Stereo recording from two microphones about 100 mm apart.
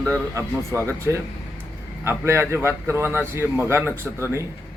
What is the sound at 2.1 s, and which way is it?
A man's voice, 25° right (ahead or behind).